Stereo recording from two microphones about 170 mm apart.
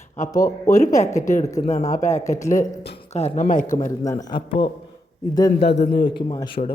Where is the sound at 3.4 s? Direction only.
50° left (ahead or behind).